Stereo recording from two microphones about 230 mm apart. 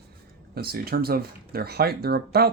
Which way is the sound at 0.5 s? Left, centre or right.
Right.